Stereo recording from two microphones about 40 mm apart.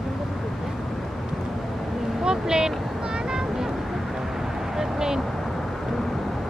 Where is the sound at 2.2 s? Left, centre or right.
Centre.